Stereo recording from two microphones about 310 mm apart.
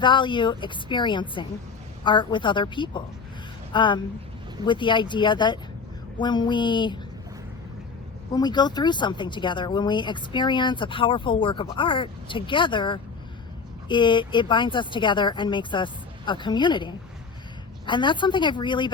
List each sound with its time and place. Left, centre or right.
0.0 s speech: centre
8.3 s speech: centre